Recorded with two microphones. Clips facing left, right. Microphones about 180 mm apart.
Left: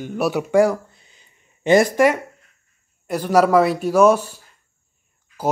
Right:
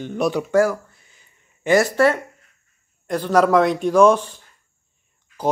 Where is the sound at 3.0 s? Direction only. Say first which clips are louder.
Left 1 dB; 10° left (ahead or behind).